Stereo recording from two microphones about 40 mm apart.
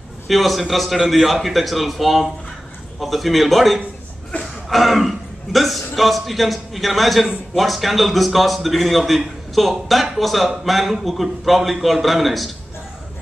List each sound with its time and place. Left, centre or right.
0.3 s a man's voice: centre
4.3 s a sound: left
4.6 s a man's voice: centre